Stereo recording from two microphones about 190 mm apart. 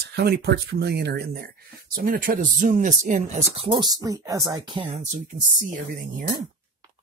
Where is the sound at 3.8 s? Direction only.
20° right (ahead or behind).